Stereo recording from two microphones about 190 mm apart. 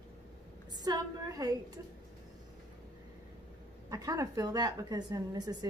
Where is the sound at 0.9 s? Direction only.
20° right (ahead or behind).